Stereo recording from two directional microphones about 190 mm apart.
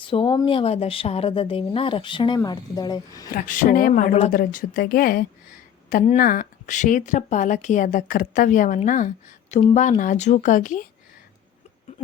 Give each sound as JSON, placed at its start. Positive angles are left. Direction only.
{"t": 0.0, "sound": "speech", "side_deg": 25}
{"t": 3.3, "sound": "speech", "side_deg": 45}